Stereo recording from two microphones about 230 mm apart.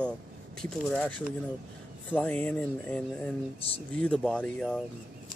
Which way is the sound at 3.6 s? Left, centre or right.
Left.